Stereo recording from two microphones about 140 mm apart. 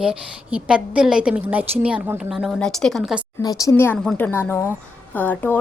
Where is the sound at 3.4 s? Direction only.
25° left (ahead or behind).